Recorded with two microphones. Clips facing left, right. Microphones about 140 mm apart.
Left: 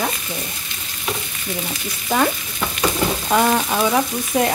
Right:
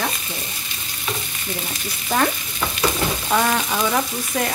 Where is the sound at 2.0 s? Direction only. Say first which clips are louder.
Left 2 dB; 5° left (ahead or behind).